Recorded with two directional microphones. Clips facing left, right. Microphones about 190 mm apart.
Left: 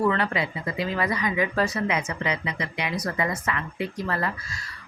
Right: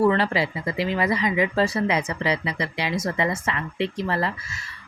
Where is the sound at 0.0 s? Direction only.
30° right (ahead or behind).